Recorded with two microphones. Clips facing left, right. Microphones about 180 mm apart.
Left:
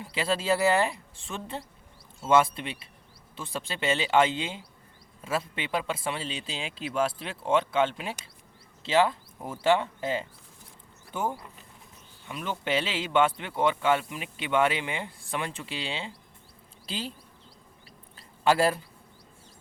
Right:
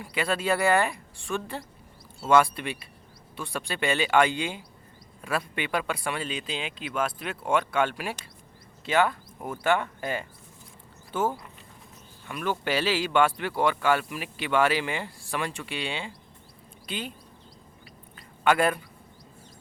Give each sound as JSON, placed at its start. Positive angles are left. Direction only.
{"t": 0.0, "sound": "speech", "side_deg": 25}
{"t": 18.4, "sound": "speech", "side_deg": 30}